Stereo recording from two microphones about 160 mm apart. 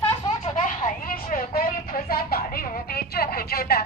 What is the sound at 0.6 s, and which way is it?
Vehicle, 55° left (ahead or behind).